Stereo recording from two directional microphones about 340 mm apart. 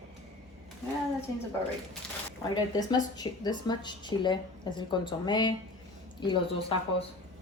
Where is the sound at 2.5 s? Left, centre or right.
Centre.